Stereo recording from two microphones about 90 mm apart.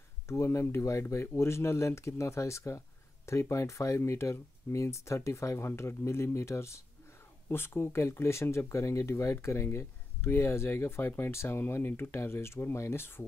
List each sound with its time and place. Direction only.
0.3 s speech: 35° left (ahead or behind)